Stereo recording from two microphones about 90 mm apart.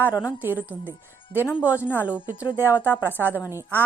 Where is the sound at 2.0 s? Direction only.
15° right (ahead or behind).